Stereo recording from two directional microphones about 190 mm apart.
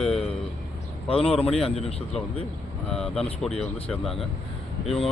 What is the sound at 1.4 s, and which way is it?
Speech, 30° left (ahead or behind).